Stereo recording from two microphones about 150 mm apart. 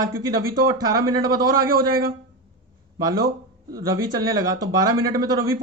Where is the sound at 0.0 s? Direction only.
25° right (ahead or behind).